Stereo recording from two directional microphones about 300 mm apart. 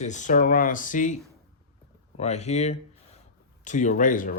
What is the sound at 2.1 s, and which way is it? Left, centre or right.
Speech, left.